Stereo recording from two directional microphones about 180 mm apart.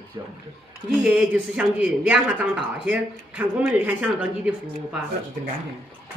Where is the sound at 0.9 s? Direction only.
Centre (ahead or behind).